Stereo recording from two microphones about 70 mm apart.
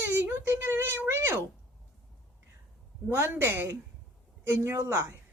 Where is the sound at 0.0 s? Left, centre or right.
Right.